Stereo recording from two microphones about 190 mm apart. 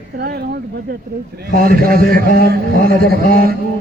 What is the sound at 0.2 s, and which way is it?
Speech, 55° right (ahead or behind).